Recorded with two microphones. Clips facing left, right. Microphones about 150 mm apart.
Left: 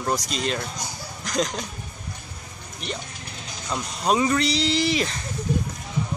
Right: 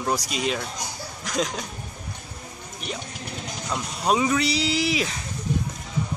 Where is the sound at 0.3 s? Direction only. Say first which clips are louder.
Even; 5° right (ahead or behind).